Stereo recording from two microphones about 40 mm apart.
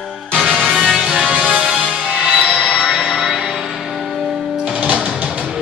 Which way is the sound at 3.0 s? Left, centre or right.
Centre.